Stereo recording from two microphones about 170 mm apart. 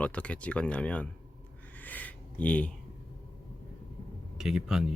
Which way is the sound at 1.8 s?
10° left (ahead or behind).